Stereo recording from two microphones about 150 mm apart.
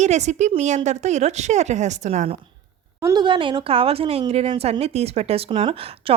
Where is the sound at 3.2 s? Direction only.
30° right (ahead or behind).